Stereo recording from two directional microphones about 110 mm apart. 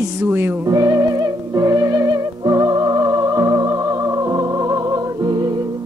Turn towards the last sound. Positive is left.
turn(degrees=-35)  # may be behind; listen again after turning